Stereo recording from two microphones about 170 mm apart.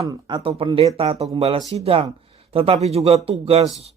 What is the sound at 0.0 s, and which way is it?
A man's voice, 25° right (ahead or behind).